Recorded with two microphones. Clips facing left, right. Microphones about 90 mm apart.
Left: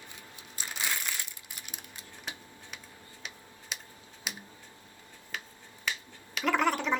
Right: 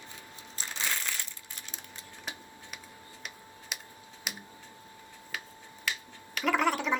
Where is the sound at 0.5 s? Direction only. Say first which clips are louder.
Even; 15° left (ahead or behind).